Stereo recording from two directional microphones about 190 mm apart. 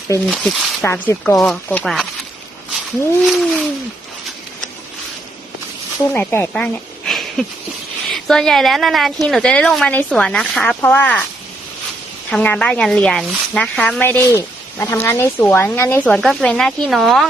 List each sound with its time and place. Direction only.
0.3 s a woman's voice: centre (ahead or behind)
3.2 s a woman's voice: centre (ahead or behind)
6.1 s speech: 10° left (ahead or behind)
7.1 s a sound: centre (ahead or behind)
8.1 s a woman's voice: 5° left (ahead or behind)
12.3 s speech: 5° left (ahead or behind)
16.1 s a woman's voice: centre (ahead or behind)